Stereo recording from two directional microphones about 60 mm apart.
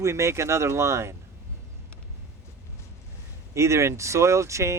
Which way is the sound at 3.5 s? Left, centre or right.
Right.